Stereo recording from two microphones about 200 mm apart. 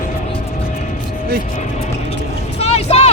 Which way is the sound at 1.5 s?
35° left (ahead or behind).